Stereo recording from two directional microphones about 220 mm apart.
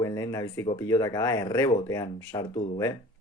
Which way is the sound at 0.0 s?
15° left (ahead or behind).